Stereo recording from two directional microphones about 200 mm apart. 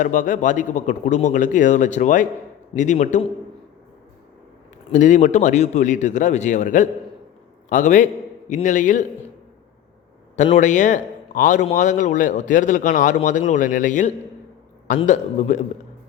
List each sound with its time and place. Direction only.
0.0 s a man's voice: 40° left (ahead or behind)
4.9 s a man's voice: 35° left (ahead or behind)
10.3 s a man's voice: 35° left (ahead or behind)